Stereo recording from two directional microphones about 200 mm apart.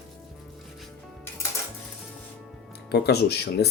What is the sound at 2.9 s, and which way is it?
Speech, 55° left (ahead or behind).